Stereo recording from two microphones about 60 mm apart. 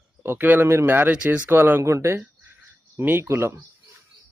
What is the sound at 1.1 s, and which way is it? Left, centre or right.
Speech, right.